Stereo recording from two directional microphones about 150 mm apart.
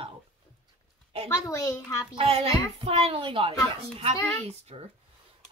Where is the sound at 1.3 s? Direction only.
20° left (ahead or behind).